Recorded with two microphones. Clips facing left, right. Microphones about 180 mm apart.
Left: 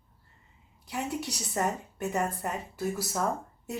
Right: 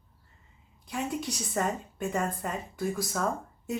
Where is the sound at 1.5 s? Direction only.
5° left (ahead or behind).